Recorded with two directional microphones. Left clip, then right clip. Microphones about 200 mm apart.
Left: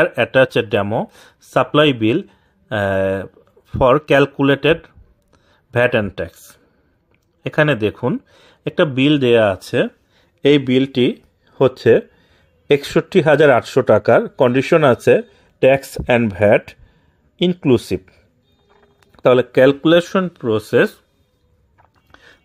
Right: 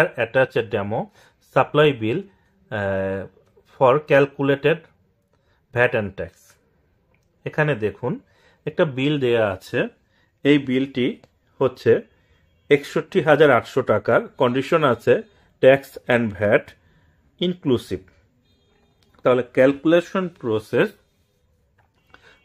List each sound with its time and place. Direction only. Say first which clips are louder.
0.0 s speech: left 5 dB; 40° left (ahead or behind)
7.4 s speech: left 6 dB; 40° left (ahead or behind)
22.1 s a sound: left 4 dB; 30° left (ahead or behind)